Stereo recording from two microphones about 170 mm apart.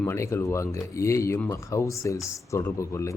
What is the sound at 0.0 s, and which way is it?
A man's voice, 15° left (ahead or behind).